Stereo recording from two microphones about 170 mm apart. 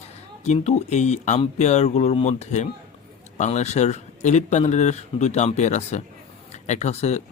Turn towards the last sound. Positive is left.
turn(degrees=40)  # may be behind; listen again after turning